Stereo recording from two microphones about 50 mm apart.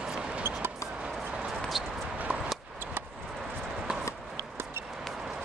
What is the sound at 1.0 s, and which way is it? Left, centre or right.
Run, right.